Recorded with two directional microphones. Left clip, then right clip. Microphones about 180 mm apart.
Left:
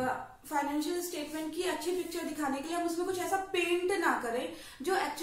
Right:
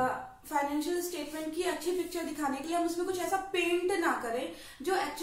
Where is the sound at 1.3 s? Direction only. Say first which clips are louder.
Right 1 dB; 15° right (ahead or behind).